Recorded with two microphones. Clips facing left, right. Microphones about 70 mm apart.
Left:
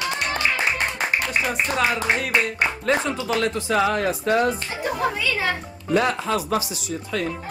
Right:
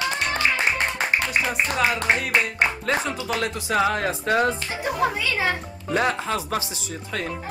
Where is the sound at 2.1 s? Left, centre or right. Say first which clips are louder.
Even; centre.